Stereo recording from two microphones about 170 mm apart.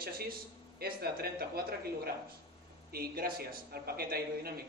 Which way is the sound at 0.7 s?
65° right (ahead or behind).